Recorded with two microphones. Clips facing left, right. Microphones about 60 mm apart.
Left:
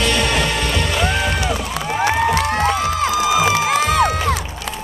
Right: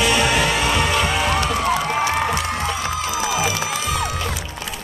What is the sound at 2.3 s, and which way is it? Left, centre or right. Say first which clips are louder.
Music: left 6 dB; left.